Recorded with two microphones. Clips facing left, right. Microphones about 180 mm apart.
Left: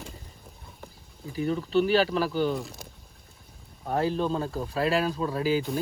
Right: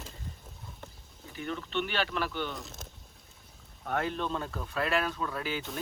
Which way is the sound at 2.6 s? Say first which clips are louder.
Left 6 dB; centre (ahead or behind).